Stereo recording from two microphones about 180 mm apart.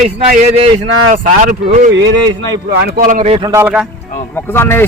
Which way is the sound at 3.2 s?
35° right (ahead or behind).